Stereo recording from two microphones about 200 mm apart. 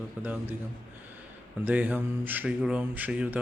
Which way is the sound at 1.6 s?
5° right (ahead or behind).